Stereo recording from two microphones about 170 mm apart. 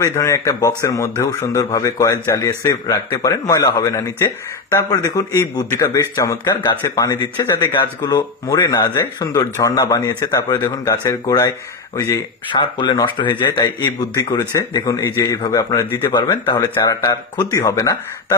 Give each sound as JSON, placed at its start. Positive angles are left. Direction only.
{"t": 0.0, "sound": "a man's voice", "side_deg": 20}